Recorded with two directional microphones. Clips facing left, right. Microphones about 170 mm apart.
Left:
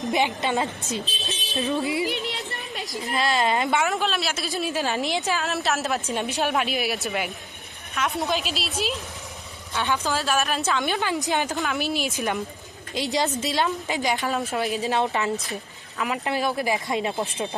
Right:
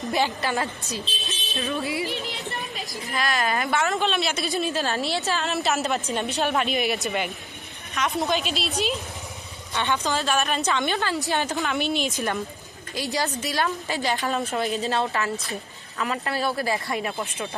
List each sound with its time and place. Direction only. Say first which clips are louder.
0.0 s a woman's voice: left 1 dB; 20° left (ahead or behind)
2.3 s a sound: right 1 dB; 70° left (ahead or behind)
3.2 s a woman's voice: left 2 dB; 25° left (ahead or behind)
3.8 s a woman's voice: right 1 dB; 5° left (ahead or behind)
4.7 s speech: left 1 dB; 15° left (ahead or behind)
5.4 s a woman's voice: right 1 dB; centre (ahead or behind)
9.7 s a woman's voice: even; 5° left (ahead or behind)
11.5 s a woman's voice: right 1 dB; centre (ahead or behind)
12.9 s a woman's voice: left 2 dB; 20° left (ahead or behind)
14.2 s a woman's voice: even; centre (ahead or behind)
14.8 s speech: left 1 dB; 15° left (ahead or behind)